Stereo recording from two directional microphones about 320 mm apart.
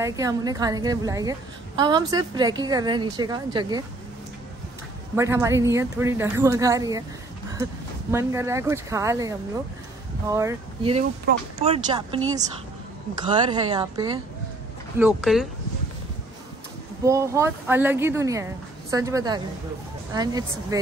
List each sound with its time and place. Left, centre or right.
0.0 s speech: centre
5.1 s speech: centre
8.1 s speech: centre
10.3 s speech: centre
17.0 s speech: centre